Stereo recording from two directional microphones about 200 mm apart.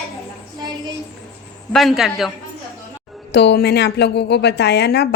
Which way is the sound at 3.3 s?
55° left (ahead or behind).